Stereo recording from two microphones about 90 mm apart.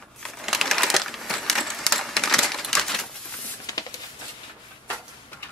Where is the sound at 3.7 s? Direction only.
40° left (ahead or behind).